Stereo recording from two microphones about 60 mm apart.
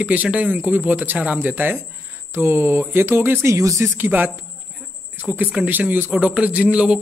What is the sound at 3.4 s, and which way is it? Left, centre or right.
Speech, right.